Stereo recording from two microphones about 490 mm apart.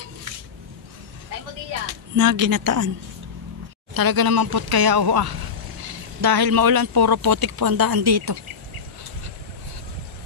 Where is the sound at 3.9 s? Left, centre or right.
Right.